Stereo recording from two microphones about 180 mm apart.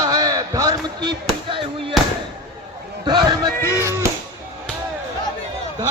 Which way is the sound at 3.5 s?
15° left (ahead or behind).